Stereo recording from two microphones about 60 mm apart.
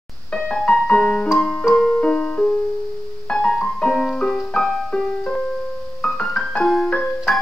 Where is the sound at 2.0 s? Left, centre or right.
Centre.